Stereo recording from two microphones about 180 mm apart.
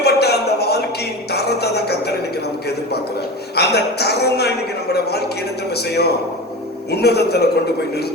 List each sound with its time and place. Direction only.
0.0 s a sound: 65° left (ahead or behind)
3.5 s speech: 65° left (ahead or behind)
5.7 s speech: 65° left (ahead or behind)